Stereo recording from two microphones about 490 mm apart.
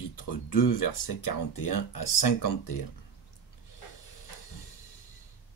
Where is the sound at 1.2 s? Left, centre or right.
Left.